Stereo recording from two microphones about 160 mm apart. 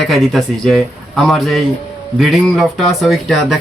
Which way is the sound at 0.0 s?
Centre (ahead or behind).